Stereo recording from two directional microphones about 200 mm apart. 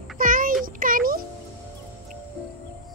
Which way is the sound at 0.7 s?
45° right (ahead or behind).